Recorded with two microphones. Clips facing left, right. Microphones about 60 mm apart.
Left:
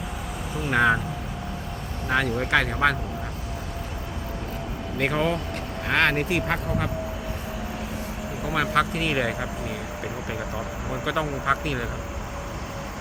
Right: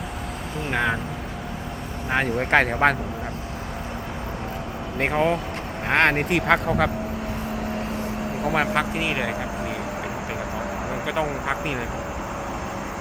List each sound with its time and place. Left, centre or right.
0.7 s speech: centre
2.0 s speech: right
4.9 s speech: right
5.9 s speech: right
8.7 s speech: right
9.0 s speech: centre
11.0 s speech: centre